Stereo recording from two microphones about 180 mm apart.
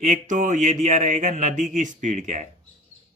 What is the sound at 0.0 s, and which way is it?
Speech, 45° right (ahead or behind).